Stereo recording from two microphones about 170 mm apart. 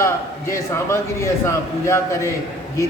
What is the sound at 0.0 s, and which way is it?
A man's voice, 15° left (ahead or behind).